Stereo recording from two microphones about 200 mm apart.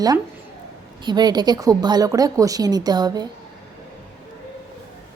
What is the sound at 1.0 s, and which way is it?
Speech, 20° right (ahead or behind).